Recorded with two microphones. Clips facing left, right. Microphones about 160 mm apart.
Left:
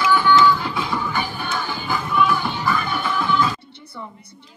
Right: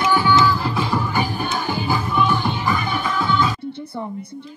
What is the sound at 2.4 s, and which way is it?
Music, 15° right (ahead or behind).